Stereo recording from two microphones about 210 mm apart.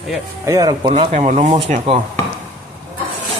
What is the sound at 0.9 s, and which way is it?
Speech, 35° right (ahead or behind).